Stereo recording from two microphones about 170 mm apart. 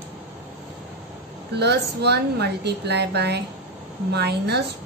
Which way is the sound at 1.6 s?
75° right (ahead or behind).